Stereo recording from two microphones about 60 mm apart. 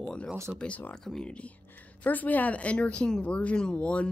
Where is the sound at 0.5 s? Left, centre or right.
Left.